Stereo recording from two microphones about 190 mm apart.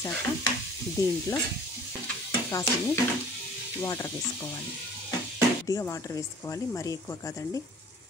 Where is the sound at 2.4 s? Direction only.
15° left (ahead or behind).